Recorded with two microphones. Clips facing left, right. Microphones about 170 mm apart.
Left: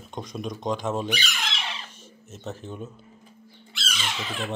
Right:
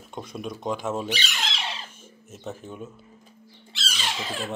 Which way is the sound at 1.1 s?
30° right (ahead or behind).